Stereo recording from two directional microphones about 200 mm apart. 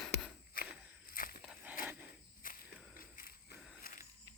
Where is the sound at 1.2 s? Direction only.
45° left (ahead or behind).